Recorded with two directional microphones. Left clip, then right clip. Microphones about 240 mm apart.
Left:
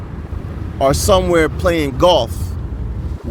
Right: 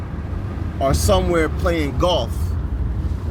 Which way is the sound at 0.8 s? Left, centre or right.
Left.